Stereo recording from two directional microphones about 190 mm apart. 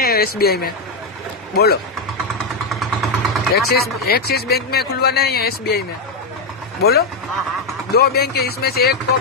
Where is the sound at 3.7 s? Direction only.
55° left (ahead or behind).